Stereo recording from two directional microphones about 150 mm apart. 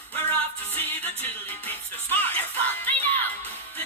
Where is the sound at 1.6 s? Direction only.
15° left (ahead or behind).